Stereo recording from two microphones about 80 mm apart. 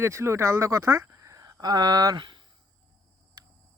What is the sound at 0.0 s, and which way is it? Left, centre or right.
Speech, right.